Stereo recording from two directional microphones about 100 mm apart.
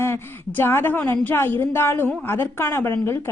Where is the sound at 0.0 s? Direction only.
25° left (ahead or behind).